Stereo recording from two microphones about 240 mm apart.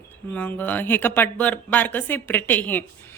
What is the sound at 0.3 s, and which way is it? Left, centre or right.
A woman's voice, centre.